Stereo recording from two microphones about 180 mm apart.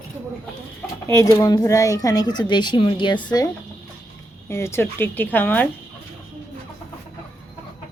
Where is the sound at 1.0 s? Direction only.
15° left (ahead or behind).